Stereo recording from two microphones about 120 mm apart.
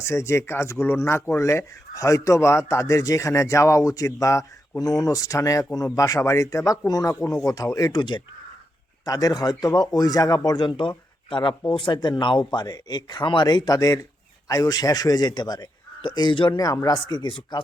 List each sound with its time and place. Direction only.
0.0 s speech: 20° left (ahead or behind); by 17.6 s 40° left (ahead or behind)